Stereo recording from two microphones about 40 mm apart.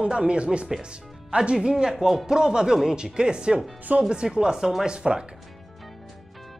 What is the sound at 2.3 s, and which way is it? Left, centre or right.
Speech, centre.